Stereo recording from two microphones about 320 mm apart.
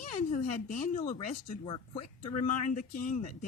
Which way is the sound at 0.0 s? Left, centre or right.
Left.